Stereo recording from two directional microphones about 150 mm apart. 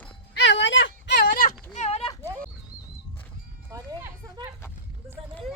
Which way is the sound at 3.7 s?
25° right (ahead or behind).